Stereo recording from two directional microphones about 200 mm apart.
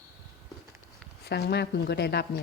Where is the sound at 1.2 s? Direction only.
55° left (ahead or behind).